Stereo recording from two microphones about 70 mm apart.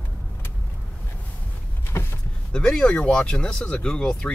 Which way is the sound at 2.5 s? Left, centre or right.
Centre.